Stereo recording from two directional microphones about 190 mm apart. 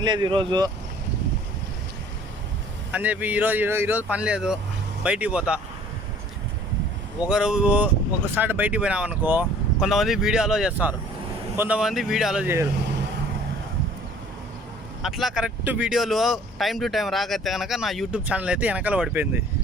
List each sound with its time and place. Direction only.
0.0 s speech: 25° right (ahead or behind)
2.9 s speech: 10° right (ahead or behind)
7.3 s speech: 5° right (ahead or behind)
15.0 s speech: centre (ahead or behind)